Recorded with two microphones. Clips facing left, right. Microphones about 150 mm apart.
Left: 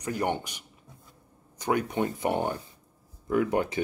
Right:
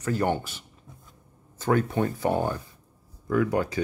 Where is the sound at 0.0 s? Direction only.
15° left (ahead or behind).